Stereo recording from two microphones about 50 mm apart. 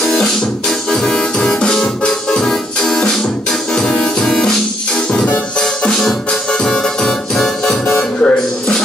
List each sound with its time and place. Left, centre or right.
0.0 s music: centre
5.6 s music: centre
7.8 s music: left